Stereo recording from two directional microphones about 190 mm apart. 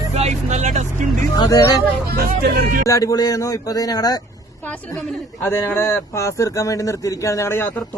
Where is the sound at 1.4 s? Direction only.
20° left (ahead or behind).